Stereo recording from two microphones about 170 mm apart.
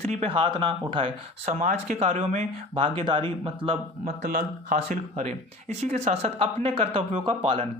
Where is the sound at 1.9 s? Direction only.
35° right (ahead or behind).